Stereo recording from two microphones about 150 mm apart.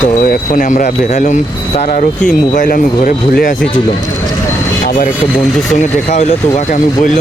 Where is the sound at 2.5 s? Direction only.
65° left (ahead or behind).